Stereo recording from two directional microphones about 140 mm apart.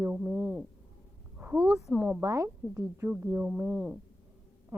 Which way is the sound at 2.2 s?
20° right (ahead or behind).